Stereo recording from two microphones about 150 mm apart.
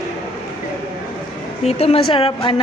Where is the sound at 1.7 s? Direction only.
45° left (ahead or behind).